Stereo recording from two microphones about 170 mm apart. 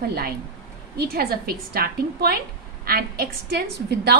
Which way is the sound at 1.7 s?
65° right (ahead or behind).